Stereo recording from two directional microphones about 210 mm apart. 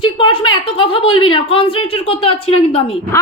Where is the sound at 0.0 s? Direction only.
25° left (ahead or behind).